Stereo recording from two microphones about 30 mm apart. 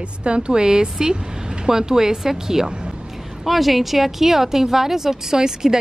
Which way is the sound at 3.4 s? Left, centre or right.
Centre.